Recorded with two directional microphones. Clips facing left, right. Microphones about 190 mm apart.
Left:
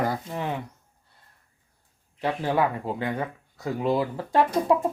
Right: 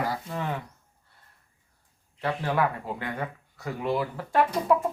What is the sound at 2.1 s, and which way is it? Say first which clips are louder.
Speech: left 3 dB; 20° left (ahead or behind).